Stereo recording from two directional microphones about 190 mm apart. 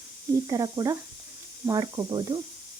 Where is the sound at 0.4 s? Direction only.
20° right (ahead or behind).